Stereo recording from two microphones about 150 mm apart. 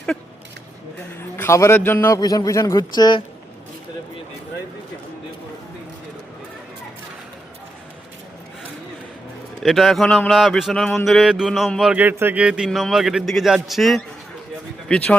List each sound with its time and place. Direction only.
1.4 s a man's voice: 20° left (ahead or behind)
9.6 s a man's voice: centre (ahead or behind)